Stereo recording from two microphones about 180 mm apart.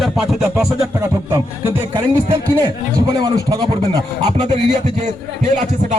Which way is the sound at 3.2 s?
20° right (ahead or behind).